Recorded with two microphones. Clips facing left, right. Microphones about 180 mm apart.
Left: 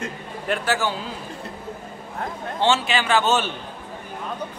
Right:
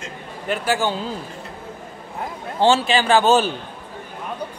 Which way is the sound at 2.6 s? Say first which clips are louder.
Right 4 dB; 35° right (ahead or behind).